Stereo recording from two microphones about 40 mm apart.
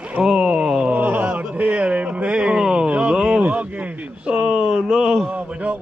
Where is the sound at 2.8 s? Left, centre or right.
Right.